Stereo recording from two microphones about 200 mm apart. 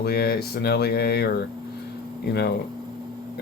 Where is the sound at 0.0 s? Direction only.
55° left (ahead or behind).